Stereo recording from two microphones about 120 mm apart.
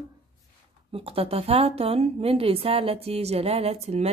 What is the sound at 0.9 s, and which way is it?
A woman's voice, 50° right (ahead or behind).